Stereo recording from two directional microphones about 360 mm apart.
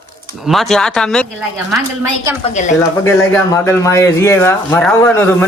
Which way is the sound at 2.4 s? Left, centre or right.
Centre.